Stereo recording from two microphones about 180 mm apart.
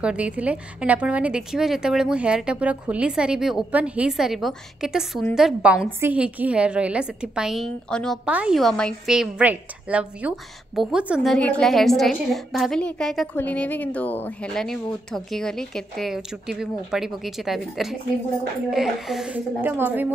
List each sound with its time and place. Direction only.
0.0 s a woman's voice: 5° right (ahead or behind)
11.2 s a woman's voice: 5° left (ahead or behind); by 20.1 s 10° right (ahead or behind)